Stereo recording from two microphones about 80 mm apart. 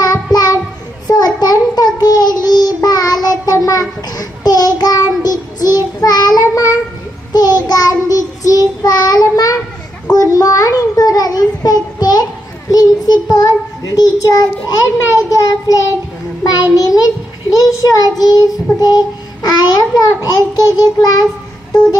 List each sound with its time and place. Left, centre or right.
0.0 s child singing: left
10.1 s a sound: left
12.7 s child singing: left